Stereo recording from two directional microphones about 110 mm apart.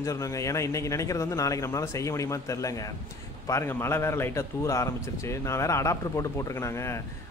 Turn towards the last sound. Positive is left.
turn(degrees=25)  # may be behind; listen again after turning